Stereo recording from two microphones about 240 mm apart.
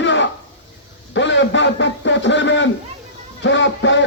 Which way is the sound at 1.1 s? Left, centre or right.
Left.